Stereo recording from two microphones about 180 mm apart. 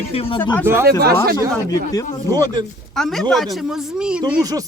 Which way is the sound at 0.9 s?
60° right (ahead or behind).